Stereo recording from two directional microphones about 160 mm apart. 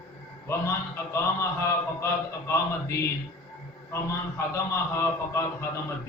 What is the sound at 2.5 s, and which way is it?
A man's voice, 15° left (ahead or behind).